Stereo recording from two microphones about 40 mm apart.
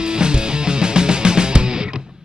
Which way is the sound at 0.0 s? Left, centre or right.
Right.